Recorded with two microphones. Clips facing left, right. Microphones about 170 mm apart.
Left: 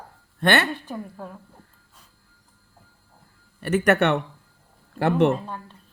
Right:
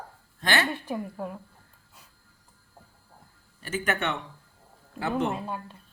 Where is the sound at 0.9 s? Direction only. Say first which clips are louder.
Right 2 dB; 10° right (ahead or behind).